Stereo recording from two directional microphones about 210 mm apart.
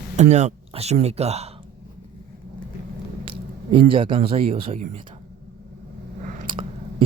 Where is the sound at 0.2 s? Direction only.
35° right (ahead or behind).